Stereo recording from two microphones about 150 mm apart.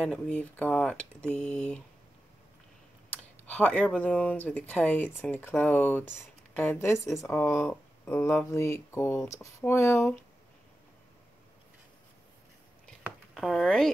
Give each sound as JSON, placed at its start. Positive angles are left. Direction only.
{"t": 0.0, "sound": "speech", "side_deg": 10}
{"t": 3.4, "sound": "speech", "side_deg": 10}
{"t": 13.0, "sound": "a sound", "side_deg": 0}